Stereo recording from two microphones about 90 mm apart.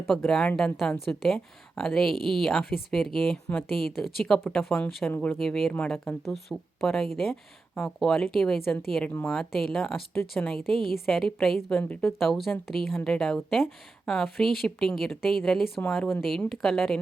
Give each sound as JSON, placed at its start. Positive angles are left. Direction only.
{"t": 0.3, "sound": "speech", "side_deg": 5}
{"t": 5.4, "sound": "speech", "side_deg": 0}
{"t": 11.8, "sound": "speech", "side_deg": 15}
{"t": 12.0, "sound": "speech", "side_deg": 0}